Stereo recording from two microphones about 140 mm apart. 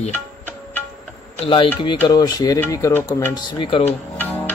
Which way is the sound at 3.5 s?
40° left (ahead or behind).